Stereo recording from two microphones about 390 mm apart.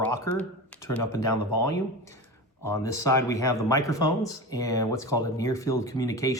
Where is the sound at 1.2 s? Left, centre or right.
Left.